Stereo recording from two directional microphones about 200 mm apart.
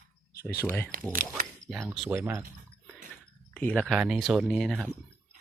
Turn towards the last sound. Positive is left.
turn(degrees=-5)  # may be behind; listen again after turning